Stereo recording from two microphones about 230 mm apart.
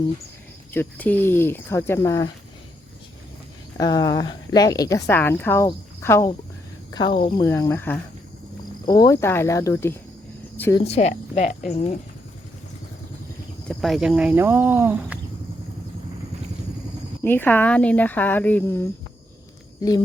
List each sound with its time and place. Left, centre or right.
0.7 s a woman's voice: centre
3.8 s a woman's voice: centre
7.1 s speech: left
7.3 s a woman's voice: centre
10.8 s cricket: left
13.7 s speech: centre
17.2 s a woman's voice: centre